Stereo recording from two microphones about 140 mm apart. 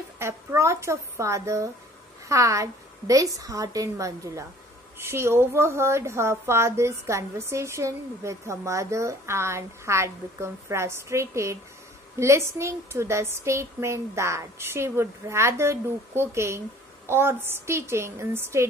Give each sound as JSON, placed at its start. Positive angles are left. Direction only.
{"t": 0.2, "sound": "a woman's voice", "side_deg": -20}